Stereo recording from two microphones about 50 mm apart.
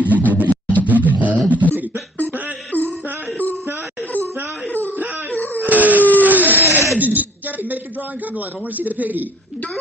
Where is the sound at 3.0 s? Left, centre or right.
Right.